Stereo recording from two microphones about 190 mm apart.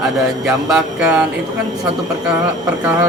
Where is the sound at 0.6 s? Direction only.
5° right (ahead or behind).